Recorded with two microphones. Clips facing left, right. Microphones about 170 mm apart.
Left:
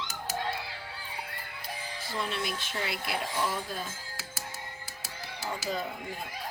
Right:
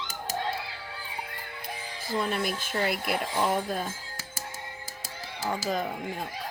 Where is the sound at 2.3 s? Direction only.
45° right (ahead or behind).